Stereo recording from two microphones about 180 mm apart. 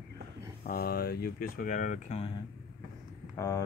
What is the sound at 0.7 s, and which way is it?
Speech, 60° left (ahead or behind).